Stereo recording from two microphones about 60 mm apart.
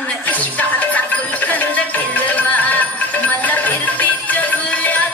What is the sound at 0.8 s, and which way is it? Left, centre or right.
Music, left.